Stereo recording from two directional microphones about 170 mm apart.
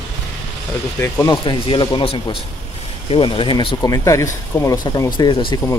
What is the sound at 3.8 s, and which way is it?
Speech, 20° left (ahead or behind).